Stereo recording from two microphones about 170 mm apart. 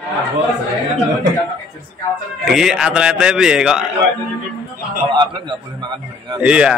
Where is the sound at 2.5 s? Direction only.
5° right (ahead or behind).